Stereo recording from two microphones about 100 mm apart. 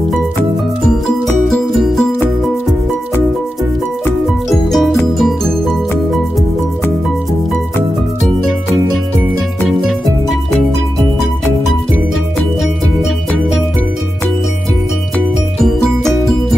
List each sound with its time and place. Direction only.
1.2 s music: 5° left (ahead or behind)
4.5 s music: centre (ahead or behind)
9.6 s music: centre (ahead or behind)
13.0 s music: centre (ahead or behind)